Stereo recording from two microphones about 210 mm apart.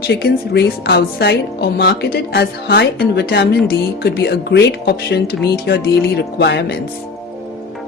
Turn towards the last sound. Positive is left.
turn(degrees=55)  # may be behind; listen again after turning